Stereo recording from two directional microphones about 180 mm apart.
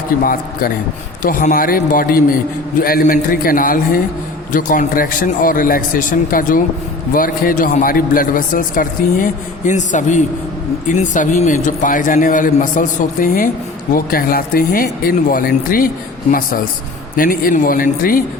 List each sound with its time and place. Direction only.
0.2 s a man's voice: 50° left (ahead or behind)
17.2 s a man's voice: 50° left (ahead or behind)